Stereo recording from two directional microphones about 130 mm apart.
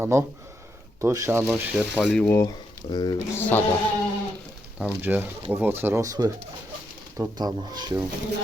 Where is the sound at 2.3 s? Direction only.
20° left (ahead or behind).